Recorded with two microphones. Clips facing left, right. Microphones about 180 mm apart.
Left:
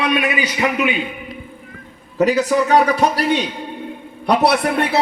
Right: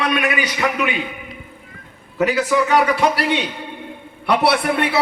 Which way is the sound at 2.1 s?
40° left (ahead or behind).